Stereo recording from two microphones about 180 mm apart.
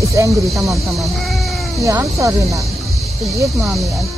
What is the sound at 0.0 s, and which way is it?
Speech, 15° right (ahead or behind).